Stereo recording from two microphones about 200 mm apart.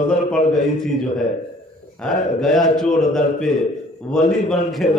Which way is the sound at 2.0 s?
5° left (ahead or behind).